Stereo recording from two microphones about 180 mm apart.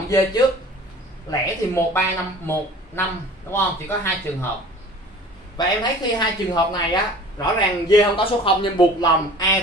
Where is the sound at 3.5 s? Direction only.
15° left (ahead or behind).